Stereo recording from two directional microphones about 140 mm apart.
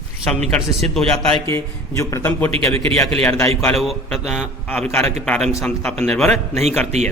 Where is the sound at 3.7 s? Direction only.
Centre (ahead or behind).